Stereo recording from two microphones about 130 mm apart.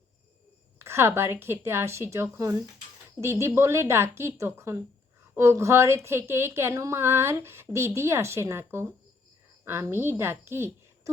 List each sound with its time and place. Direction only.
0.8 s speech: 20° right (ahead or behind)